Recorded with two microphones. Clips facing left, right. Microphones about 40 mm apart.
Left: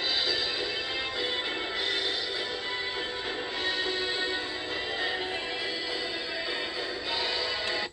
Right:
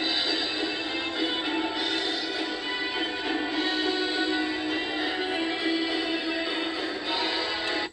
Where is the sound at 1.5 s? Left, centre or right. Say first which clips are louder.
Right 3 dB; right.